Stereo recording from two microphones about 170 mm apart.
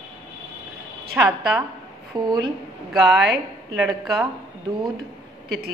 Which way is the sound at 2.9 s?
Centre (ahead or behind).